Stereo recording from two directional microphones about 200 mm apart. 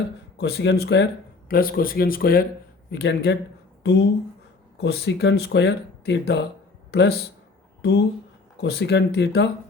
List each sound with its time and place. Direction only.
0.3 s speech: 55° left (ahead or behind)
1.5 s speech: 45° left (ahead or behind)
2.9 s speech: 55° left (ahead or behind)
4.8 s speech: 55° left (ahead or behind)